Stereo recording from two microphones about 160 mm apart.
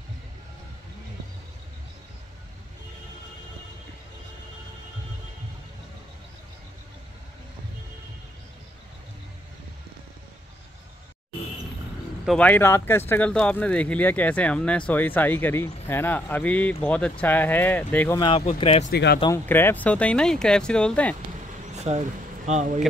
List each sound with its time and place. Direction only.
12.3 s speech: 10° left (ahead or behind)
18.4 s speech: 40° left (ahead or behind)
18.9 s speech: 90° left
19.3 s speech: 15° left (ahead or behind)
21.7 s a sound: 45° right (ahead or behind)
22.5 s speech: 45° right (ahead or behind)